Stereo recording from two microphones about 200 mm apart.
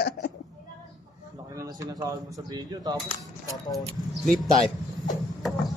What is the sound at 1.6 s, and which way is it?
Speech, 15° right (ahead or behind).